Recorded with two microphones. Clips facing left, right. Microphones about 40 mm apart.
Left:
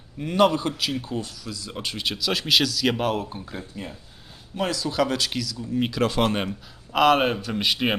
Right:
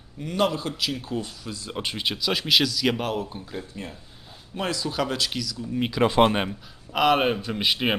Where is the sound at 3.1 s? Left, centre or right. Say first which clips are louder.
Left 2 dB; centre.